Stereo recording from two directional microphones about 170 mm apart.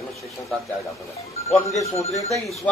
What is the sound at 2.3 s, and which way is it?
Speech, centre (ahead or behind).